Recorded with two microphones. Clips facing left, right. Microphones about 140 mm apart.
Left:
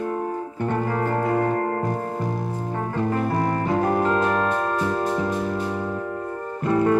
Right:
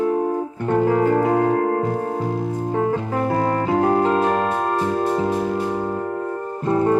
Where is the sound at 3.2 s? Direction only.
75° right (ahead or behind).